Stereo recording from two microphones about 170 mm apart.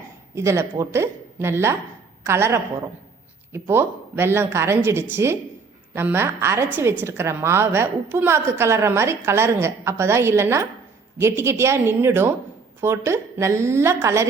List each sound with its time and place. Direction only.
0.3 s a woman's voice: 15° right (ahead or behind)